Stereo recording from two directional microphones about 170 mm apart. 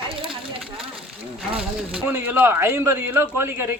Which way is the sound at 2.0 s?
10° right (ahead or behind).